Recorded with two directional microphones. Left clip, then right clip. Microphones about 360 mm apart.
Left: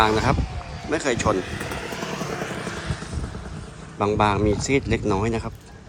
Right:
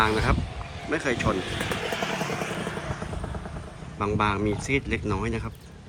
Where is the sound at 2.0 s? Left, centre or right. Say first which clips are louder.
Even; right.